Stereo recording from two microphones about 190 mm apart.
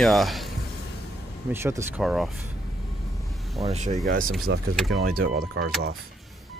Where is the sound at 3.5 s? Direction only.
35° right (ahead or behind).